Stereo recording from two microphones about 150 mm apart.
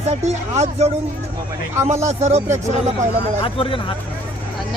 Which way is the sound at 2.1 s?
50° right (ahead or behind).